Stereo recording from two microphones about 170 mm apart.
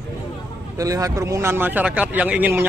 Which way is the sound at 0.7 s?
20° right (ahead or behind).